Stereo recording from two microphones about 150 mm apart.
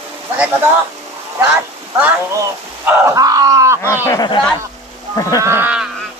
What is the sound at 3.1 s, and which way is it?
Groan, 20° right (ahead or behind).